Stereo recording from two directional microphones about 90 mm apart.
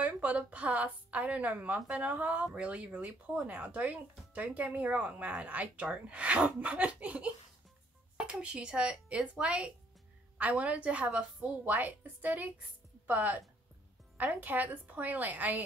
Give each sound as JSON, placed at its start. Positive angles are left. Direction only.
{"t": 0.0, "sound": "a woman's voice", "side_deg": -15}